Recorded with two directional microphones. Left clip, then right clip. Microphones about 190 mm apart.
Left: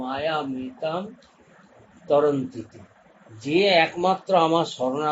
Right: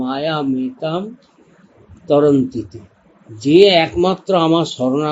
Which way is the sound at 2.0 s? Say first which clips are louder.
Right 6 dB; 50° right (ahead or behind).